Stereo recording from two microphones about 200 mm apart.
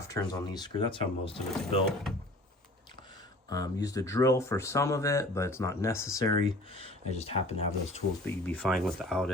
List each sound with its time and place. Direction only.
0.1 s speech: 20° left (ahead or behind)
3.5 s speech: 15° left (ahead or behind)
6.7 s speech: 30° left (ahead or behind)
8.2 s speech: 5° left (ahead or behind)